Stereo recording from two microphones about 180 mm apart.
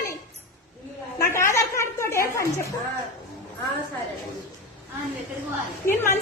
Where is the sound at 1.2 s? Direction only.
15° left (ahead or behind).